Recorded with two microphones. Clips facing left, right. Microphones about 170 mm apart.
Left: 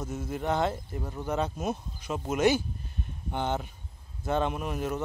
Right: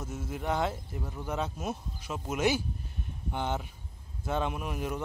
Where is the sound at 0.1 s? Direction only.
5° right (ahead or behind).